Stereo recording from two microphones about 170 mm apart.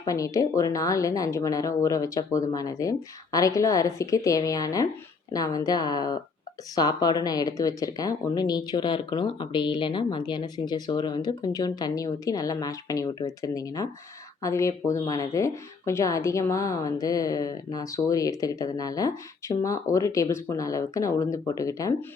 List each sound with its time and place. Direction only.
0.0 s speech: 20° left (ahead or behind)